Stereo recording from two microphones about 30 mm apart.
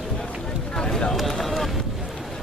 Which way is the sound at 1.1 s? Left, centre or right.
Centre.